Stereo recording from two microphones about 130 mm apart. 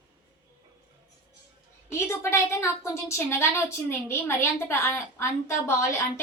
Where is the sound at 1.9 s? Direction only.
20° left (ahead or behind).